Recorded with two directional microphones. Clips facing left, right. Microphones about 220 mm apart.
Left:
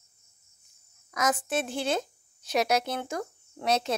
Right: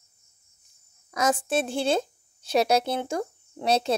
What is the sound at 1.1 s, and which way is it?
A woman's voice, 30° right (ahead or behind).